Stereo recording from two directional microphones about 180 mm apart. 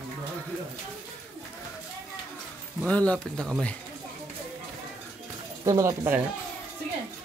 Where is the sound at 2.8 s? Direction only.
5° left (ahead or behind).